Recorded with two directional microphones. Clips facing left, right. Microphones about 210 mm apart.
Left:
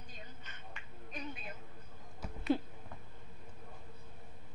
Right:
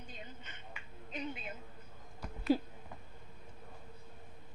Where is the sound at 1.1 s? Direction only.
25° right (ahead or behind).